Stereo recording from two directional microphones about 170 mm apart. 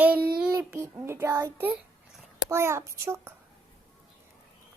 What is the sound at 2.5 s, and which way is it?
Speech, 15° right (ahead or behind).